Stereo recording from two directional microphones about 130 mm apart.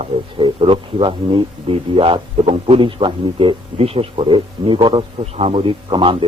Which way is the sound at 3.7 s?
50° right (ahead or behind).